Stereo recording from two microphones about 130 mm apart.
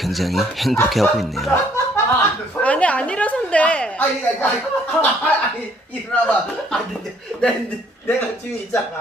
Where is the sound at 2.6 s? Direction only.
10° left (ahead or behind).